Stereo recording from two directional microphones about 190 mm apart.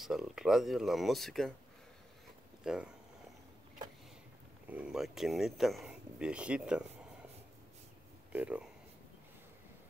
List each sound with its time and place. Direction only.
0.0 s speech: centre (ahead or behind)
2.6 s speech: 5° right (ahead or behind)
4.6 s speech: 5° right (ahead or behind)
8.3 s speech: 5° right (ahead or behind)